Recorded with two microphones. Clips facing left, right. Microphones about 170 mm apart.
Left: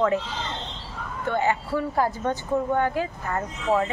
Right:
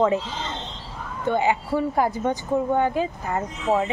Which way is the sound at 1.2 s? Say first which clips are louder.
Right 3 dB; 15° right (ahead or behind).